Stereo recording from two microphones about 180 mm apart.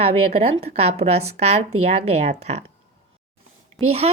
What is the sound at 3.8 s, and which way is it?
Speech, centre (ahead or behind).